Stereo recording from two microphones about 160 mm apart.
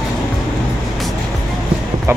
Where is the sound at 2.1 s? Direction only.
15° right (ahead or behind).